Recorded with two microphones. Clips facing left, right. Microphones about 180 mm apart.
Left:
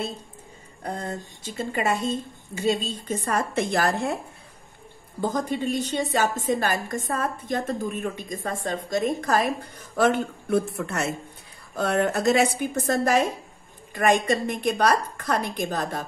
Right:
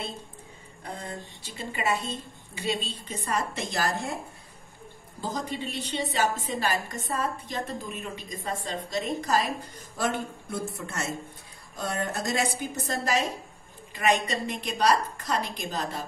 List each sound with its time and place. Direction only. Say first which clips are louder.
0.8 s a woman's voice: left 6 dB; 45° left (ahead or behind); by 4.2 s 60° left (ahead or behind)
5.2 s a woman's voice: left 7 dB; 50° left (ahead or behind)